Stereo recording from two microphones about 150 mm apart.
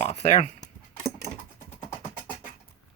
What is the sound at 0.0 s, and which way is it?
Speech, 50° left (ahead or behind).